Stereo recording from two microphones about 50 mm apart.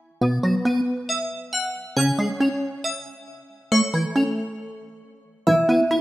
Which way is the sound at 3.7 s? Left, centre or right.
Centre.